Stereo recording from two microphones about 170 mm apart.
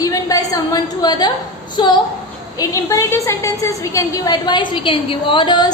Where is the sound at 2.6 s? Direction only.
20° left (ahead or behind).